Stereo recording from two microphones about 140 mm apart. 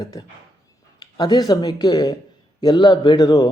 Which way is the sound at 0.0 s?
30° left (ahead or behind).